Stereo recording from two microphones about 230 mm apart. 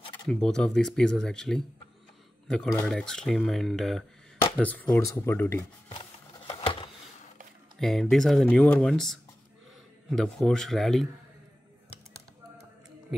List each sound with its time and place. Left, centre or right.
0.3 s speech: centre
5.9 s a sound: left
7.8 s speech: centre